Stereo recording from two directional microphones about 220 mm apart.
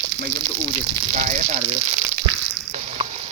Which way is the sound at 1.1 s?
35° right (ahead or behind).